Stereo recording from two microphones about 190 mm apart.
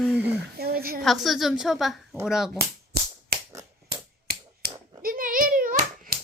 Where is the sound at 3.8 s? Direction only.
55° right (ahead or behind).